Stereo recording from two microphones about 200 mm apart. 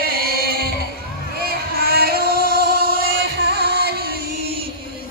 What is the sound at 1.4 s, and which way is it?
Singing, 50° right (ahead or behind).